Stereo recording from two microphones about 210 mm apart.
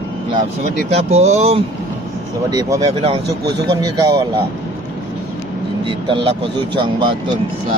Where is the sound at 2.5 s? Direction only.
15° right (ahead or behind).